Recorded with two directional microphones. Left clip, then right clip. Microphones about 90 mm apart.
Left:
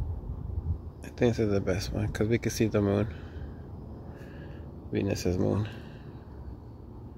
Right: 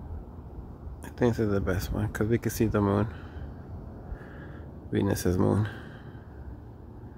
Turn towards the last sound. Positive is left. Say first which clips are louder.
# right 3 dB
turn(degrees=-65)  # may be behind; listen again after turning